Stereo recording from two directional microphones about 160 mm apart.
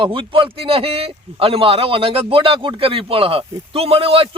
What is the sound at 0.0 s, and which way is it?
A man's voice, 30° right (ahead or behind).